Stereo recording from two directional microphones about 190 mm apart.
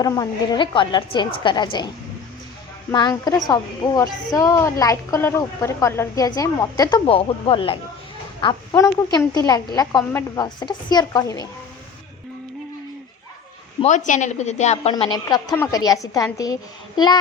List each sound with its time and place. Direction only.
0.0 s a woman's voice: 20° left (ahead or behind)
2.9 s a woman's voice: 20° left (ahead or behind)
10.4 s a woman's voice: 25° left (ahead or behind)
13.8 s speech: 40° left (ahead or behind)
14.9 s a woman's voice: 25° left (ahead or behind)